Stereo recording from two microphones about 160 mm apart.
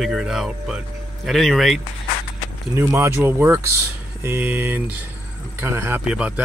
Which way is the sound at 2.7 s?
15° right (ahead or behind).